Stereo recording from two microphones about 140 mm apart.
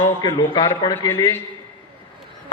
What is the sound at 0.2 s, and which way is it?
Speech, 30° left (ahead or behind).